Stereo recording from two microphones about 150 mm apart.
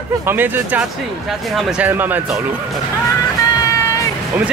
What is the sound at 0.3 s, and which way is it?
Speech, 10° right (ahead or behind).